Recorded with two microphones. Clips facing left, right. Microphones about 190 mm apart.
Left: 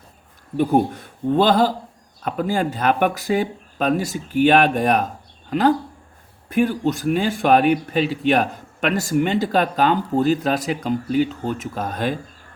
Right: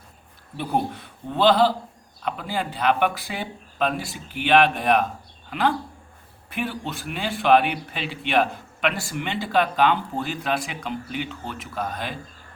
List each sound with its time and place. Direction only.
0.5 s speech: 45° left (ahead or behind)